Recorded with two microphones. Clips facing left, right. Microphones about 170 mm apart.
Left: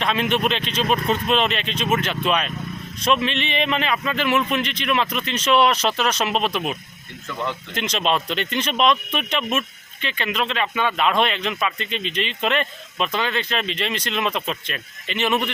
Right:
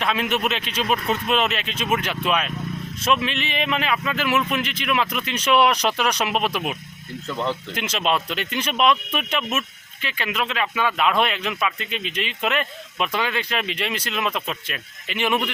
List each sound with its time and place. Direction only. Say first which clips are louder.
0.0 s speech: left 2 dB; 5° right (ahead or behind)
7.3 s speech: right 2 dB; 30° right (ahead or behind)
7.7 s speech: left 5 dB; 10° right (ahead or behind)